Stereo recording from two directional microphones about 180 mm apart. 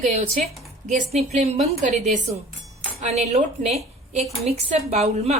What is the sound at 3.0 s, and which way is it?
A woman's voice, 40° right (ahead or behind).